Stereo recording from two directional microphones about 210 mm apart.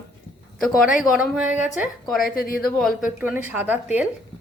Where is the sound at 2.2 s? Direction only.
45° left (ahead or behind).